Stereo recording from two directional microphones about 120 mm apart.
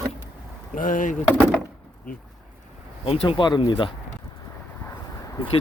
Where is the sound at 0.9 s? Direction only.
90° left.